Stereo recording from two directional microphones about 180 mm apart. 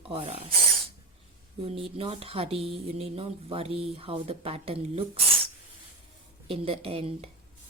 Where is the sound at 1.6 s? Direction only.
30° right (ahead or behind).